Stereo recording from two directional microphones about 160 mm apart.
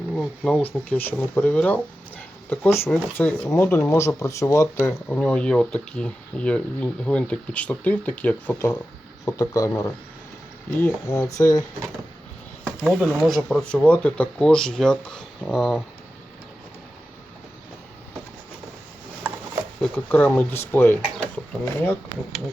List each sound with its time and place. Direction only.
0.2 s speech: 5° left (ahead or behind); by 11.6 s 20° left (ahead or behind)
12.6 s speech: centre (ahead or behind)
19.8 s speech: 10° left (ahead or behind)